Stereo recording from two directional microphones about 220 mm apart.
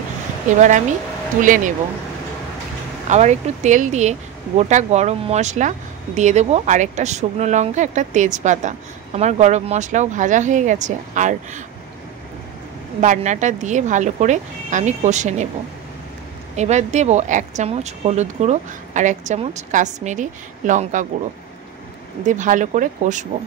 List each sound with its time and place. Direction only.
0.6 s speech: 35° right (ahead or behind)
3.1 s speech: 30° right (ahead or behind)
13.0 s speech: 35° right (ahead or behind)
16.5 s speech: 30° right (ahead or behind)
22.2 s speech: 35° right (ahead or behind)